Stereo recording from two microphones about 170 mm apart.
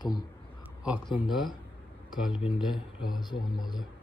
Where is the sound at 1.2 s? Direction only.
Centre (ahead or behind).